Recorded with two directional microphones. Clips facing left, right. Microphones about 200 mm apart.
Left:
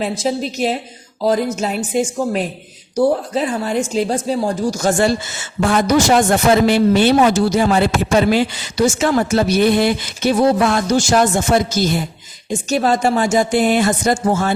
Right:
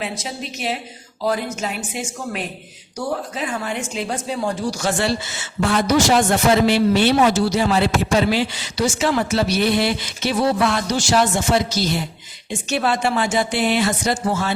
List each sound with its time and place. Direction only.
0.0 s a woman's voice: 35° left (ahead or behind)